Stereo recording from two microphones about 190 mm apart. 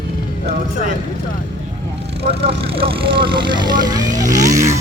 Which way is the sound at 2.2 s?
30° right (ahead or behind).